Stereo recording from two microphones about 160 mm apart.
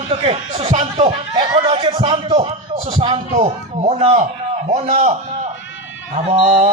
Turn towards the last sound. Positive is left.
turn(degrees=-40)  # may be behind; listen again after turning